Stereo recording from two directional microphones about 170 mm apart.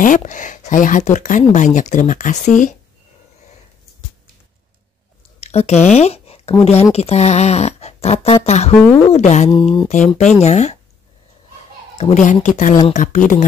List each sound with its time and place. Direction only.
0.0 s speech: 50° left (ahead or behind)
5.4 s a sound: 40° left (ahead or behind)
6.6 s speech: 40° left (ahead or behind)
9.5 s speech: 30° left (ahead or behind)
9.8 s speech: 45° left (ahead or behind)
12.0 s speech: 45° left (ahead or behind)